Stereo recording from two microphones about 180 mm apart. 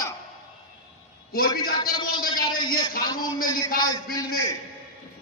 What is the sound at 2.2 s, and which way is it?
Speech, 55° left (ahead or behind).